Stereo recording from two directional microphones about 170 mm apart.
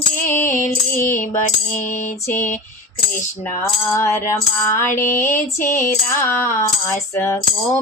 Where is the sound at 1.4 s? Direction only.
45° left (ahead or behind).